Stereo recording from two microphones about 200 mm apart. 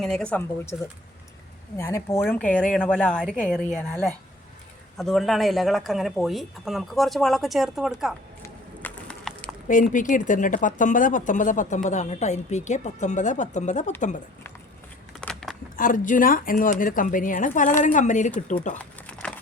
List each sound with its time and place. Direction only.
0.0 s speech: 5° left (ahead or behind)
8.4 s a sound: 5° left (ahead or behind)
9.6 s speech: 40° left (ahead or behind)
15.2 s a sound: 5° left (ahead or behind)
15.7 s speech: 40° left (ahead or behind)
18.8 s crumpling: 5° left (ahead or behind)